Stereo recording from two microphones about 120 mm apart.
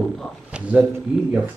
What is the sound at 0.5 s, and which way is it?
Speech, 10° right (ahead or behind).